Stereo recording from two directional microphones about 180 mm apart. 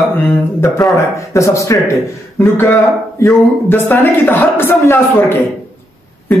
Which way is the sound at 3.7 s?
10° left (ahead or behind).